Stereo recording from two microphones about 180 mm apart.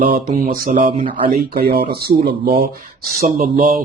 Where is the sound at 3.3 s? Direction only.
50° right (ahead or behind).